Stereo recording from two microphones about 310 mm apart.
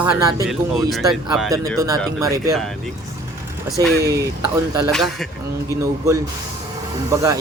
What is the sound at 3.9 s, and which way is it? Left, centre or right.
Speech, right.